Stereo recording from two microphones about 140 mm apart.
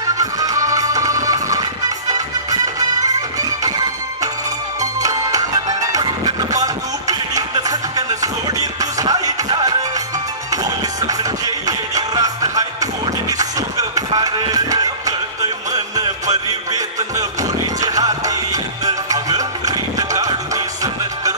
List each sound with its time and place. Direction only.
0.2 s music: 25° right (ahead or behind)